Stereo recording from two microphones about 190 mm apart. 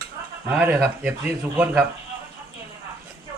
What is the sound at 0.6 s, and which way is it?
Speech, 5° right (ahead or behind).